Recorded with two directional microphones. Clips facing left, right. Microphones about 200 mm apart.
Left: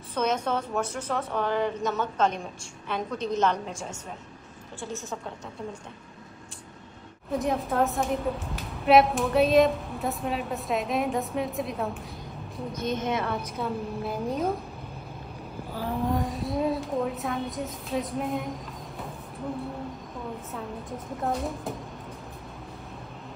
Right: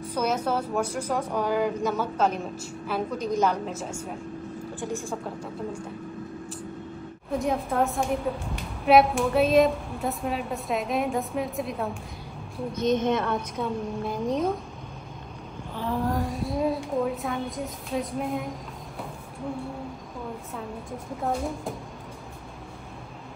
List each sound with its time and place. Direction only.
0.1 s a woman's voice: 10° right (ahead or behind)
7.2 s a woman's voice: centre (ahead or behind)
12.9 s a woman's voice: 55° right (ahead or behind)
13.6 s a woman's voice: 5° left (ahead or behind)
16.1 s a woman's voice: centre (ahead or behind)
21.2 s a woman's voice: centre (ahead or behind)